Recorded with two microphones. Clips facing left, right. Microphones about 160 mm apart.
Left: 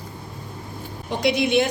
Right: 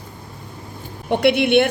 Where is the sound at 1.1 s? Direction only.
65° right (ahead or behind).